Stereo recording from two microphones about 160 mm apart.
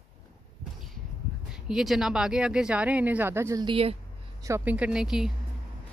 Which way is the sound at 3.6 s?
35° right (ahead or behind).